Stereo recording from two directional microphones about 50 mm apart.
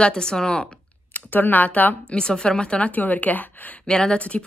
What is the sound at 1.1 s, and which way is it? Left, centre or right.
Speech, left.